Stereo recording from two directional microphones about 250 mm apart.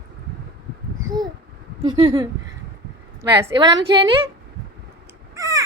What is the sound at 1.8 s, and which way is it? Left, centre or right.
A woman's voice, centre.